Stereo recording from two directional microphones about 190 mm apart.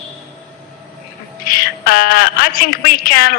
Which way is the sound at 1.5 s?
50° left (ahead or behind).